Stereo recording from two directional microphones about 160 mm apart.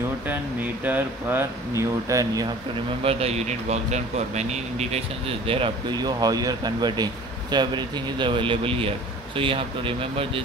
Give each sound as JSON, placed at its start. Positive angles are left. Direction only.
{"t": 0.8, "sound": "speech", "side_deg": -10}
{"t": 3.0, "sound": "speech", "side_deg": -40}
{"t": 5.5, "sound": "speech", "side_deg": -30}